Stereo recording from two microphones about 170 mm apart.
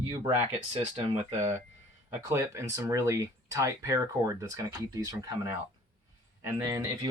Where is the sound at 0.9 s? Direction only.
40° right (ahead or behind).